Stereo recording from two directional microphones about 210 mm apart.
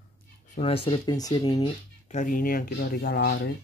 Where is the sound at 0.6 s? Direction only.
25° left (ahead or behind).